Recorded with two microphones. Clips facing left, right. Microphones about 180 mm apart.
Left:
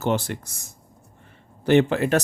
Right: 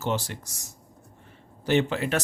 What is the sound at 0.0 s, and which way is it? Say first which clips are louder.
Speech: left 5 dB; 55° left (ahead or behind).